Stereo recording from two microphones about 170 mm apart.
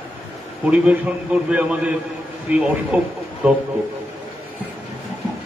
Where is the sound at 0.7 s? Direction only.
5° right (ahead or behind).